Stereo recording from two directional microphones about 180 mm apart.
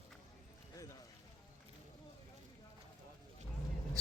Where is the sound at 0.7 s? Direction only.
20° left (ahead or behind).